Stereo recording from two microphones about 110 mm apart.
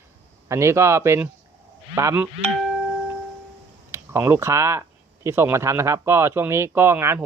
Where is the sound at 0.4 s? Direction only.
25° right (ahead or behind).